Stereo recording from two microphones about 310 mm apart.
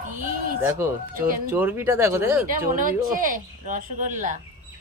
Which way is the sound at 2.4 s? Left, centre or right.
Right.